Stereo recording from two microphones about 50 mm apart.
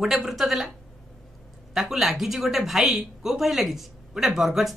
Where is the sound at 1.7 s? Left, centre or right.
Centre.